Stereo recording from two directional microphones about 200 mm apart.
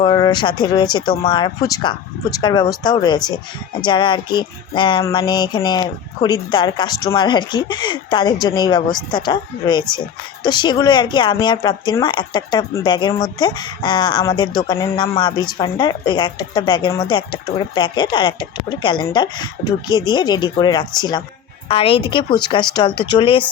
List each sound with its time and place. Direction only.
0.0 s speech: 25° left (ahead or behind)